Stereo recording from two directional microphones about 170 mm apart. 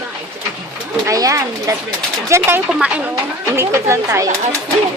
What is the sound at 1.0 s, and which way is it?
Speech, 20° right (ahead or behind).